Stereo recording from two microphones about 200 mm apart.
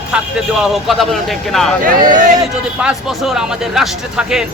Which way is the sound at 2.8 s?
5° right (ahead or behind).